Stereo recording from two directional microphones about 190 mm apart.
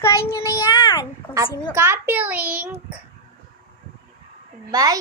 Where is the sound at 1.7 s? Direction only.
15° right (ahead or behind).